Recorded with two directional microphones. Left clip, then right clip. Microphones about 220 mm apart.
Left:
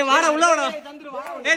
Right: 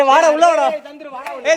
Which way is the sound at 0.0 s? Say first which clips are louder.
Right 6 dB; 10° left (ahead or behind).